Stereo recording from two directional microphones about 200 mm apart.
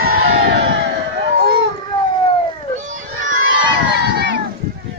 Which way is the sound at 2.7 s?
40° right (ahead or behind).